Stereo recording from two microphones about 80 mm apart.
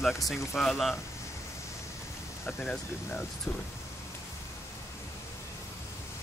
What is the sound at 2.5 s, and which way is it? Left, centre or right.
Speech, centre.